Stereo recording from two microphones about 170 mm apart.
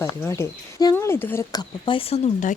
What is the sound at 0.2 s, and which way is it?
Speech, 15° left (ahead or behind).